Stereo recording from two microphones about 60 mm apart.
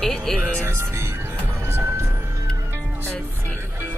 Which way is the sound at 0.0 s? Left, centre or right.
Centre.